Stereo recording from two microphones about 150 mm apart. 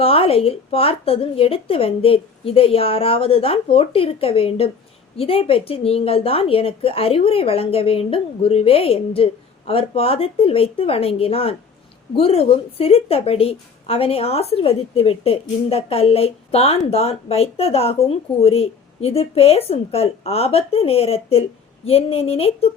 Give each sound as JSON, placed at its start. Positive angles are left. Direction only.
{"t": 0.0, "sound": "a woman's voice", "side_deg": 40}